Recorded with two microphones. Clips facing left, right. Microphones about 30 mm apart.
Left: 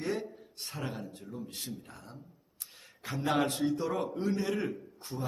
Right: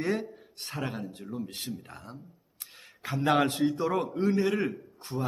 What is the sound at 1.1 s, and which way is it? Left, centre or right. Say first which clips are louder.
Speech: right 5 dB; right.